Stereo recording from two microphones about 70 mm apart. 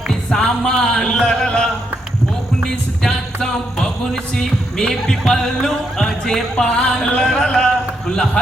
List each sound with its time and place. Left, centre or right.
0.1 s music: centre